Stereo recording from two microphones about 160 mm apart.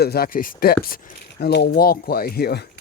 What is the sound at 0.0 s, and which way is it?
Speech, 75° left (ahead or behind).